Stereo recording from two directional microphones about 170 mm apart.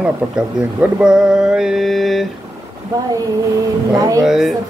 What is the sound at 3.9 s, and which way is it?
Speech, 20° right (ahead or behind).